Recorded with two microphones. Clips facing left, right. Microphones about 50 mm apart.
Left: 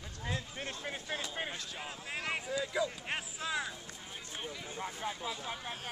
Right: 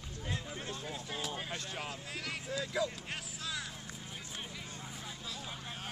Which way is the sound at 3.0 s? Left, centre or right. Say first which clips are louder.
Left 4 dB; left.